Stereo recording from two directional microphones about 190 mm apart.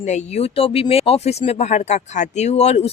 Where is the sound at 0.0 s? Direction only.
40° left (ahead or behind).